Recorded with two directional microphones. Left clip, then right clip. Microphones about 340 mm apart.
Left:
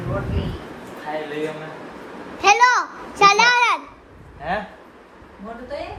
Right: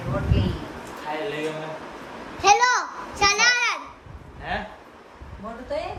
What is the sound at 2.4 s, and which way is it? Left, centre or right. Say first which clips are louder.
Children playing: left 3 dB; centre.